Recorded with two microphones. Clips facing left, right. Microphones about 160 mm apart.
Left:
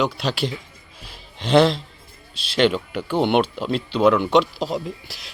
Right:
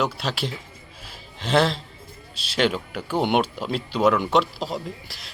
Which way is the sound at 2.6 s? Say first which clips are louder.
Left 4 dB; 5° right (ahead or behind).